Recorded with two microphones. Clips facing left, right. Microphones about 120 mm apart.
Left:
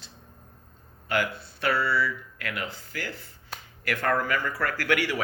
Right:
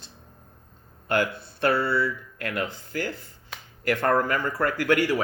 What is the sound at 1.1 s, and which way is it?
A man's voice, 50° right (ahead or behind).